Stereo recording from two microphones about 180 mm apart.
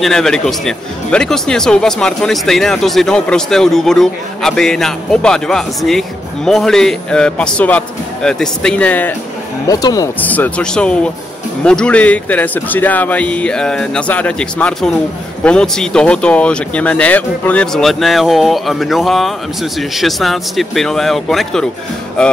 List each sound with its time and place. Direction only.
0.0 s speech: centre (ahead or behind)
9.7 s speech: 20° left (ahead or behind)
10.2 s speech: 10° left (ahead or behind)